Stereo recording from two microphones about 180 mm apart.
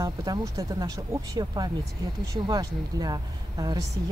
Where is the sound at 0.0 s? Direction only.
20° right (ahead or behind).